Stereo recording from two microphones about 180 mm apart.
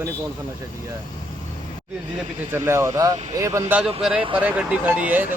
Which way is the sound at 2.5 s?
15° right (ahead or behind).